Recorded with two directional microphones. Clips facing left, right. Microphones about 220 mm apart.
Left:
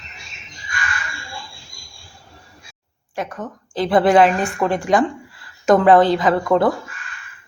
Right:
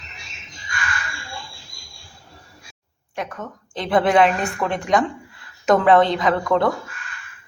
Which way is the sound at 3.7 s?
Centre (ahead or behind).